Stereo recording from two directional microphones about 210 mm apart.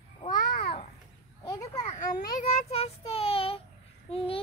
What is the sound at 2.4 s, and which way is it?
Child singing, 30° left (ahead or behind).